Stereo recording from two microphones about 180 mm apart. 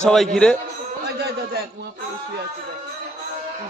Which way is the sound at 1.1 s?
65° right (ahead or behind).